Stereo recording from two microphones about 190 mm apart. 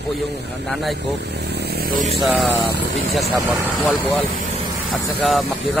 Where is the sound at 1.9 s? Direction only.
35° right (ahead or behind).